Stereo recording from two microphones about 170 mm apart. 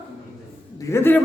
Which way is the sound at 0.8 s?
15° left (ahead or behind).